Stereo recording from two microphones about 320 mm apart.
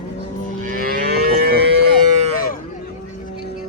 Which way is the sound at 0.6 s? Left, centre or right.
Right.